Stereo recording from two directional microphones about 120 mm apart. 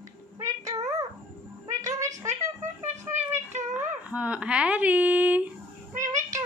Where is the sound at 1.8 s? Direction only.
30° right (ahead or behind).